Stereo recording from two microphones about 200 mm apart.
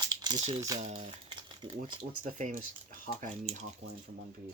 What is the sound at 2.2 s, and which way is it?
Speech, 35° right (ahead or behind).